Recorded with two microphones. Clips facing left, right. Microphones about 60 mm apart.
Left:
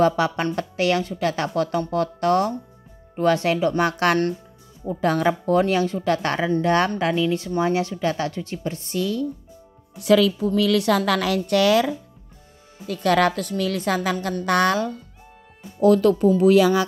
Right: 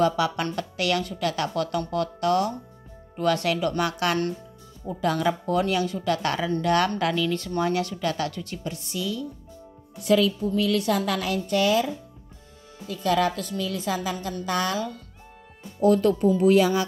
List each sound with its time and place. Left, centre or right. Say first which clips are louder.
0.0 s a woman's voice: left 3 dB; left
4.0 s speech: left 5 dB; left
5.0 s a woman's voice: left 4 dB; left
10.0 s a woman's voice: left 4 dB; left
12.8 s a woman's voice: left 4 dB; left
15.8 s a woman's voice: left 4 dB; left